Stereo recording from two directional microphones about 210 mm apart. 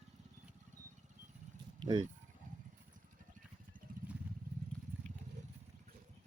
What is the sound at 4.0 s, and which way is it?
Vehicle, 40° right (ahead or behind).